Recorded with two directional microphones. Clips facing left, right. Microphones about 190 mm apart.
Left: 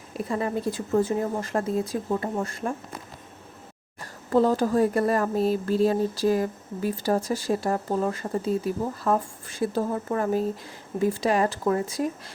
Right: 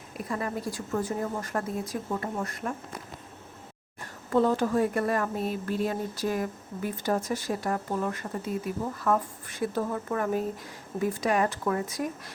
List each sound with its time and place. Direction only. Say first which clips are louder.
0.3 s speech: left 5 dB; 25° left (ahead or behind)
4.3 s speech: left 3 dB; 35° left (ahead or behind)